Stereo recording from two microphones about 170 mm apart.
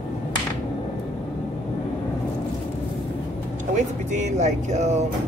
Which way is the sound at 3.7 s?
45° right (ahead or behind).